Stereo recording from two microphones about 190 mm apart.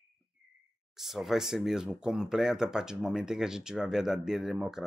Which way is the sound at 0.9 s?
Centre (ahead or behind).